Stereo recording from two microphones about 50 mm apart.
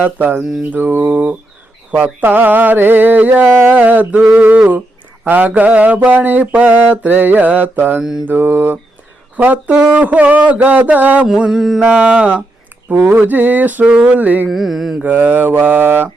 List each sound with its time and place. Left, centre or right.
0.0 s mantra: right
5.2 s mantra: right
9.3 s speech: right
9.9 s mantra: right
11.3 s mantra: centre
11.8 s mantra: right
12.9 s mantra: right
13.8 s mantra: right
14.2 s mantra: right
14.4 s mantra: centre
15.0 s mantra: right